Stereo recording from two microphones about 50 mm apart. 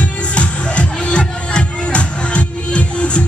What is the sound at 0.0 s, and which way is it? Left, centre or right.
Music, left.